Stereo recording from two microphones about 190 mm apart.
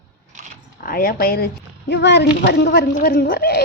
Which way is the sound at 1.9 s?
65° left (ahead or behind).